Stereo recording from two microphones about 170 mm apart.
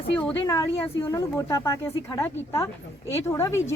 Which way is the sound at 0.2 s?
15° left (ahead or behind).